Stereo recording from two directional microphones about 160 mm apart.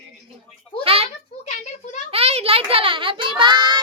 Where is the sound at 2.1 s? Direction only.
40° right (ahead or behind).